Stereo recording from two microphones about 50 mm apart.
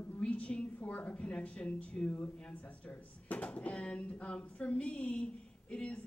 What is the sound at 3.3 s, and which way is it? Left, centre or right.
A woman's voice, left.